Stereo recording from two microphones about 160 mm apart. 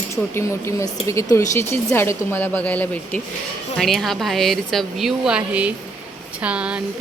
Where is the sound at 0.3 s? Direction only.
15° left (ahead or behind).